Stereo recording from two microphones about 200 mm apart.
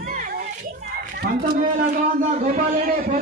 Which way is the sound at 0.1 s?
45° right (ahead or behind).